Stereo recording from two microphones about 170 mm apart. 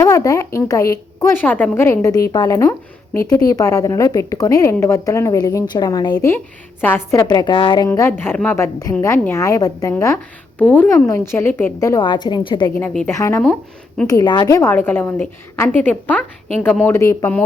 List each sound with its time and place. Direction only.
0.0 s a woman's voice: 20° left (ahead or behind)
6.1 s a woman's voice: 10° left (ahead or behind)
7.9 s a woman's voice: 15° left (ahead or behind)
12.8 s a woman's voice: 10° left (ahead or behind)
14.1 s a woman's voice: 25° left (ahead or behind)